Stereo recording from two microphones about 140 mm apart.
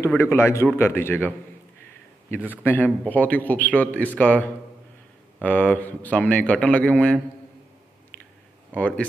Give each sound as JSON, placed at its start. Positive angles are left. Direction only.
{"t": 0.1, "sound": "a man's voice", "side_deg": 15}
{"t": 2.5, "sound": "a man's voice", "side_deg": 15}
{"t": 8.7, "sound": "a man's voice", "side_deg": 10}